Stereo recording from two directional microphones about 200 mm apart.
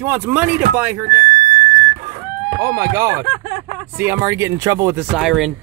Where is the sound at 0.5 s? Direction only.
45° right (ahead or behind).